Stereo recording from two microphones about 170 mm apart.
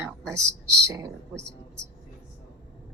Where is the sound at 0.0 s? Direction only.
15° right (ahead or behind).